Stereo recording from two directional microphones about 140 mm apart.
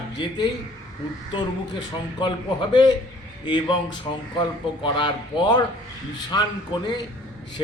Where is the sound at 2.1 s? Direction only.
35° left (ahead or behind).